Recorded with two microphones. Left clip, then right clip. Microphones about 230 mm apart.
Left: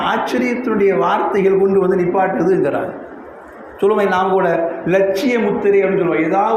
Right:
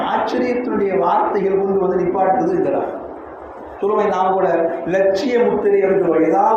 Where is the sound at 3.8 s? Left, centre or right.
Left.